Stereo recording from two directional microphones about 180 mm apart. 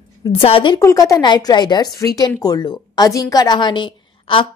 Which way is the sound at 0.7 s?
15° left (ahead or behind).